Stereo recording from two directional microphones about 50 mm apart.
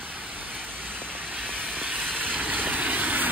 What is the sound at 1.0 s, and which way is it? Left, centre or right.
Vehicle, right.